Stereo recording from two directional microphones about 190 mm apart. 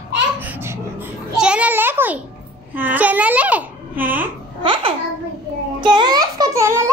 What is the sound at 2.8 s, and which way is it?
A child's voice, 10° right (ahead or behind).